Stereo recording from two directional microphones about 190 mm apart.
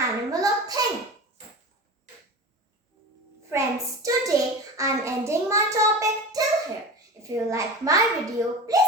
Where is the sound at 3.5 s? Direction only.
15° right (ahead or behind).